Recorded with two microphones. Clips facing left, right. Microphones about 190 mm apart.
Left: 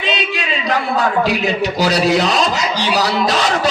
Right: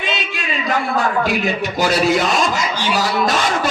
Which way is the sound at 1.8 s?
50° right (ahead or behind).